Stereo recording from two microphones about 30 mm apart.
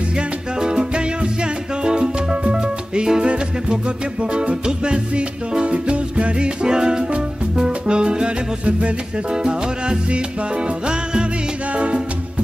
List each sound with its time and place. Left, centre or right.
0.1 s music: right
7.5 s salsa music: right
8.6 s music: right
9.3 s music: right
11.7 s music: right